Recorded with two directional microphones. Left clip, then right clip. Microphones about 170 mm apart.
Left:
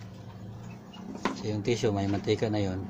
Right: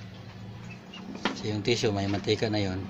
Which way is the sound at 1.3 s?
15° right (ahead or behind).